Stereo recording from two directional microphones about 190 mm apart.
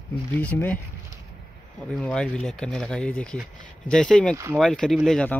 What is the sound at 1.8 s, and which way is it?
Speech, 5° left (ahead or behind).